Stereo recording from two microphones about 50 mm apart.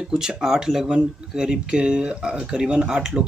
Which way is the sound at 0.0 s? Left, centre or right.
Centre.